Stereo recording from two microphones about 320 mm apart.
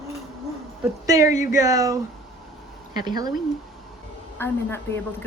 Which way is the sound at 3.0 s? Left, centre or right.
Centre.